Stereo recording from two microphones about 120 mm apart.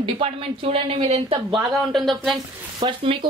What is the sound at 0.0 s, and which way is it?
Speech, 50° right (ahead or behind).